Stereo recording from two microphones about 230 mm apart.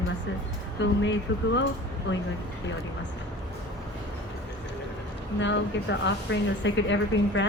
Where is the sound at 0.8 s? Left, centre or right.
Left.